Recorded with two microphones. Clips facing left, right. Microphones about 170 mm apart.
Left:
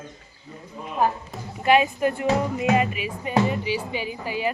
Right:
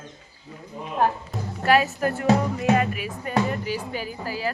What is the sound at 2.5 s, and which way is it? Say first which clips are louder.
Music: even; 10° left (ahead or behind).